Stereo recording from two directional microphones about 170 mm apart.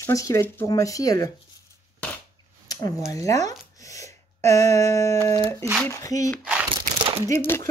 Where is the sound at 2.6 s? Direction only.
20° left (ahead or behind).